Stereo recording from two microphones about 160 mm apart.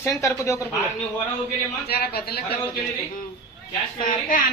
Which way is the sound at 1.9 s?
70° left (ahead or behind).